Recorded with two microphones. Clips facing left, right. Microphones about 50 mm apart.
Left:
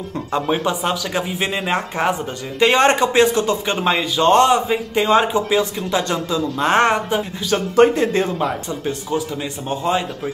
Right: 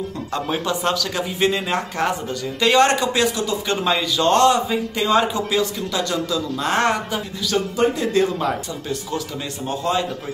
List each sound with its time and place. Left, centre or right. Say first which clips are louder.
0.3 s speech: left 4 dB; centre
7.7 s speech: left 9 dB; left
8.0 s speech: left 1 dB; left
9.7 s speech: left 2 dB; left